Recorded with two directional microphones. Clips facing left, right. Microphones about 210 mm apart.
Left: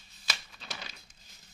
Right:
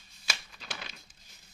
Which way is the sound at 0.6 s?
Centre (ahead or behind).